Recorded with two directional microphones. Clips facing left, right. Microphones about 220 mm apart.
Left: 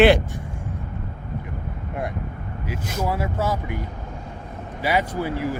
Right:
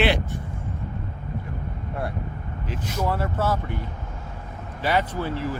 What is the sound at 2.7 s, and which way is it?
Speech, 10° left (ahead or behind).